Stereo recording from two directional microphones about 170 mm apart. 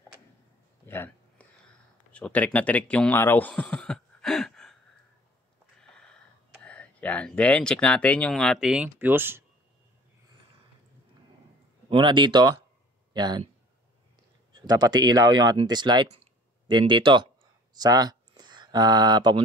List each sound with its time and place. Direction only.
0.8 s a sound: 10° left (ahead or behind)
2.1 s speech: 10° left (ahead or behind)
6.6 s speech: 10° left (ahead or behind); by 9.4 s 10° right (ahead or behind)
11.9 s speech: 30° right (ahead or behind)
14.5 s speech: 25° right (ahead or behind)